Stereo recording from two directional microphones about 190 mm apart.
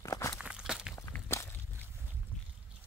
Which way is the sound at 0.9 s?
15° left (ahead or behind).